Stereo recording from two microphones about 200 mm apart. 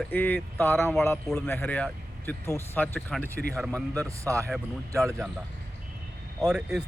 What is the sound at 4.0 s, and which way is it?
Speech, 15° right (ahead or behind).